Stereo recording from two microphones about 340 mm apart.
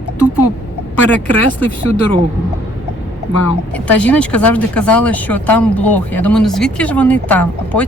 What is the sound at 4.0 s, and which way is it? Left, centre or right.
Speech, centre.